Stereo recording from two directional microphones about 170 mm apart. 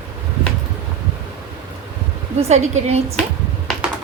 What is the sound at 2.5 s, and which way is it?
Speech, 40° right (ahead or behind).